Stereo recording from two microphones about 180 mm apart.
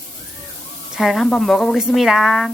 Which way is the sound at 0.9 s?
Centre (ahead or behind).